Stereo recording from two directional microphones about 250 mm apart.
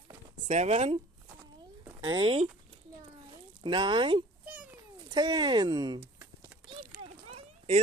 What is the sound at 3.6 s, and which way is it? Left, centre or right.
Speech, centre.